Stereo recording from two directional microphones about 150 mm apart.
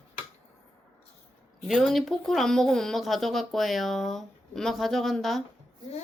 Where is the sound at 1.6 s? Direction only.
Centre (ahead or behind).